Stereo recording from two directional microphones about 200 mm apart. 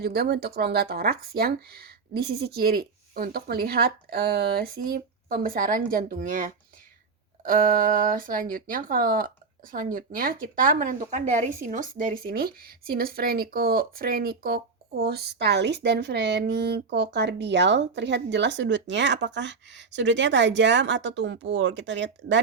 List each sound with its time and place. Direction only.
0.0 s speech: 50° right (ahead or behind)